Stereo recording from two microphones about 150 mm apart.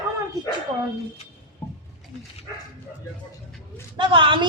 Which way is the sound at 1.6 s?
10° left (ahead or behind).